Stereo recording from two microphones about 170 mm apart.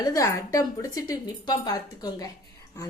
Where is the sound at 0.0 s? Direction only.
20° left (ahead or behind).